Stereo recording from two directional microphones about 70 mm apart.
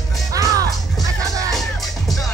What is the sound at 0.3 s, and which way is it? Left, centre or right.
Music, right.